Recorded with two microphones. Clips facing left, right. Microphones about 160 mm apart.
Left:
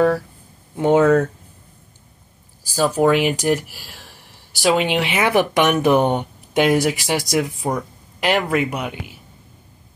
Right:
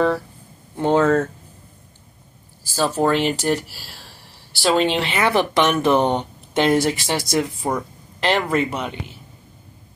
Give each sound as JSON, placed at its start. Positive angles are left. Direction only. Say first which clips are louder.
{"t": 0.7, "sound": "speech", "louder": "left 3 dB", "side_deg": 10}
{"t": 2.7, "sound": "speech", "louder": "left 3 dB", "side_deg": 15}